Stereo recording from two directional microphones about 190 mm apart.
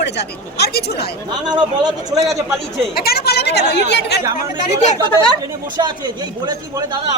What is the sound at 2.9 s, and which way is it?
Speech, 55° left (ahead or behind).